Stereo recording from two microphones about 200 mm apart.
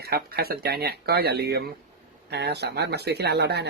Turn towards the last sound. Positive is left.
turn(degrees=-55)  # may be behind; listen again after turning